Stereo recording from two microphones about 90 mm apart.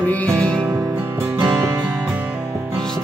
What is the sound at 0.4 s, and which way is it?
Music, 10° left (ahead or behind).